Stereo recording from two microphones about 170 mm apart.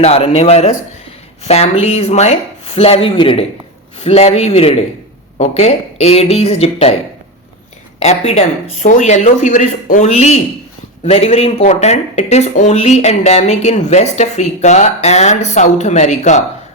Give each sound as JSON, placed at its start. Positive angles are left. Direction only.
{"t": 0.0, "sound": "speech", "side_deg": 35}
{"t": 7.9, "sound": "speech", "side_deg": 35}